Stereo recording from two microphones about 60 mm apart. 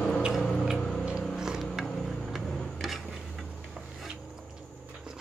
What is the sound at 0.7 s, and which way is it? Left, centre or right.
Music, centre.